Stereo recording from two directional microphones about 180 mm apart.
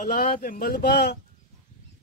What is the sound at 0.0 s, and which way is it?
Speech, 45° left (ahead or behind).